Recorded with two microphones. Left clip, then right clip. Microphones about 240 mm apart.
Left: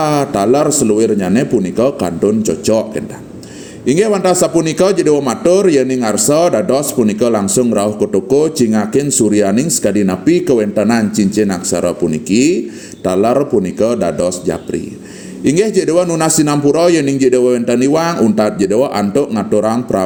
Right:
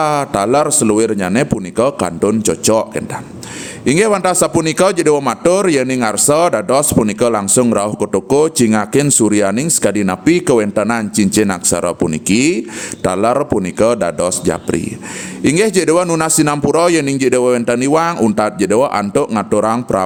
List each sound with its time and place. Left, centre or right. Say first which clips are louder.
0.0 s a man's voice: left 1 dB; right